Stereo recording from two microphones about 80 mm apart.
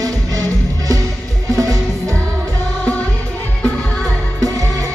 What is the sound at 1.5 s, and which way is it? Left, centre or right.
Music, right.